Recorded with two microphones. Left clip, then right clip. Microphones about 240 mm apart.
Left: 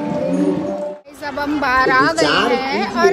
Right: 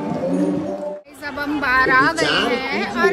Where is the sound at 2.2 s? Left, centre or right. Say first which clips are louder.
Left 3 dB; left.